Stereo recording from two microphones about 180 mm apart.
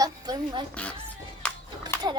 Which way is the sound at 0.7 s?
5° left (ahead or behind).